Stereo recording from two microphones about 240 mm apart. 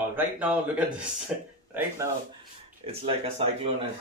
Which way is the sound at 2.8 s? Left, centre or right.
Right.